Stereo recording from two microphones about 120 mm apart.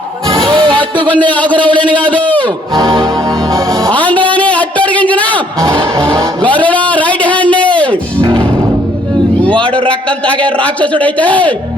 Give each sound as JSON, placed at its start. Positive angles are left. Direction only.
{"t": 0.3, "sound": "a sound", "side_deg": -45}
{"t": 1.1, "sound": "a man's voice", "side_deg": 10}
{"t": 1.6, "sound": "a man's voice", "side_deg": -45}
{"t": 2.1, "sound": "a man's voice", "side_deg": 10}
{"t": 2.7, "sound": "music", "side_deg": -30}
{"t": 3.9, "sound": "music", "side_deg": 10}
{"t": 6.4, "sound": "a sound", "side_deg": 10}
{"t": 9.5, "sound": "a man's voice", "side_deg": 10}